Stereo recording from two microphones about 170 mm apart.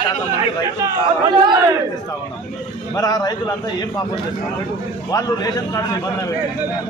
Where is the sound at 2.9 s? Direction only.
20° left (ahead or behind).